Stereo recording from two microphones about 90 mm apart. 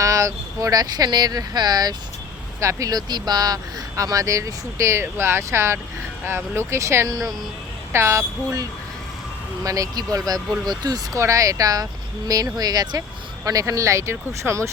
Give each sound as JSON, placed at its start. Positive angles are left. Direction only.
{"t": 0.0, "sound": "speech", "side_deg": -35}
{"t": 2.6, "sound": "speech", "side_deg": -35}
{"t": 7.9, "sound": "speech", "side_deg": -30}
{"t": 9.6, "sound": "speech", "side_deg": -40}
{"t": 11.2, "sound": "speech", "side_deg": -35}